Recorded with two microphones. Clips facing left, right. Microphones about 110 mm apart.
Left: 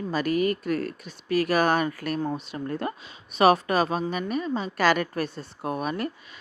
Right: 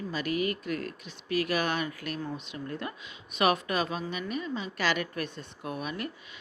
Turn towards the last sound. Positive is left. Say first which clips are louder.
# left 7 dB
turn(degrees=40)  # may be behind; listen again after turning